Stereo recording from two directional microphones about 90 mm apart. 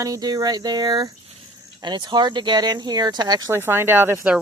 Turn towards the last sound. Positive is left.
turn(degrees=-25)  # may be behind; listen again after turning